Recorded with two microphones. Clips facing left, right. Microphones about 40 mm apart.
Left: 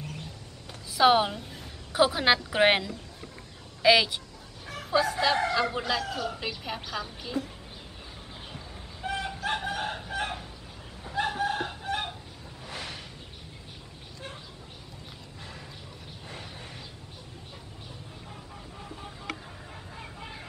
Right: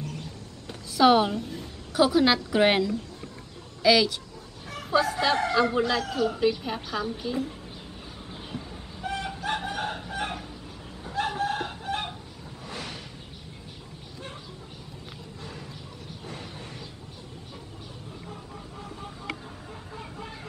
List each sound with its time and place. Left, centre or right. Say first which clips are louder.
0.9 s a woman's voice: right 2 dB; centre
1.9 s a woman's voice: right 2 dB; centre
4.6 s speech: right 2 dB; centre
9.0 s chicken: even; centre
12.6 s a sound: right 1 dB; centre
16.3 s a sound: right 2 dB; centre
20.0 s vehicle: right 2 dB; centre